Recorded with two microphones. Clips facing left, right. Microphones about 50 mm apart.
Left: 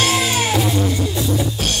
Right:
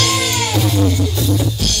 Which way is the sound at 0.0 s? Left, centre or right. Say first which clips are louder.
Even; left.